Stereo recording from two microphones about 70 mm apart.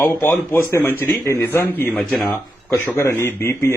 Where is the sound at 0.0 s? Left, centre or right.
Left.